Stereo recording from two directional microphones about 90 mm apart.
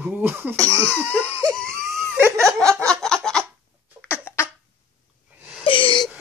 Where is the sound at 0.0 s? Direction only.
20° right (ahead or behind).